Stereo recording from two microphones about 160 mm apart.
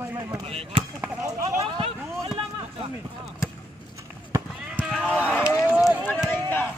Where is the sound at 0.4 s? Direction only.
35° right (ahead or behind).